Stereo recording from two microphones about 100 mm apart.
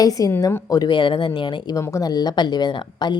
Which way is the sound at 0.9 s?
55° left (ahead or behind).